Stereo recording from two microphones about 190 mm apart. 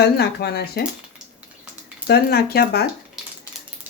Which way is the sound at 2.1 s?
55° left (ahead or behind).